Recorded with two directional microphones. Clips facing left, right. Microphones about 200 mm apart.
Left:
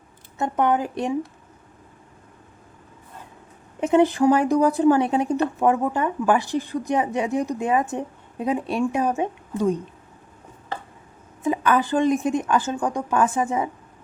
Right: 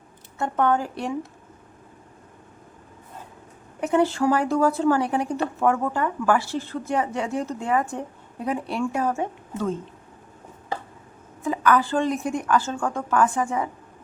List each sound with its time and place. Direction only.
0.3 s speech: 20° left (ahead or behind)
3.8 s speech: 20° left (ahead or behind)
11.4 s speech: 20° left (ahead or behind)